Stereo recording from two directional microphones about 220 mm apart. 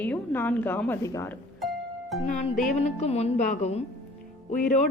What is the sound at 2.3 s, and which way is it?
A woman's voice, 35° left (ahead or behind).